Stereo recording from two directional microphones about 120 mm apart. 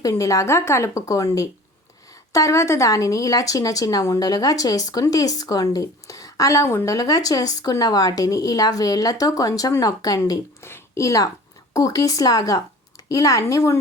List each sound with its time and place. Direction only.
0.0 s speech: 30° left (ahead or behind)